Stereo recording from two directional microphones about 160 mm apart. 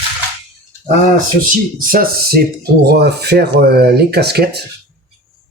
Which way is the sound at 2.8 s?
90° right.